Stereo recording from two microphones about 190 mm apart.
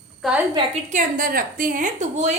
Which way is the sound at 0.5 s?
35° right (ahead or behind).